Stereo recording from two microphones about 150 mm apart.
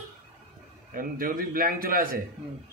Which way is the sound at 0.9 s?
70° right (ahead or behind).